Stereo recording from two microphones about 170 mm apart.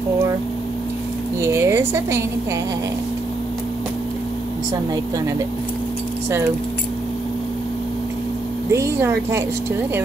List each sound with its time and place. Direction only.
1.4 s a woman's voice: 15° right (ahead or behind)
8.7 s speech: 15° right (ahead or behind)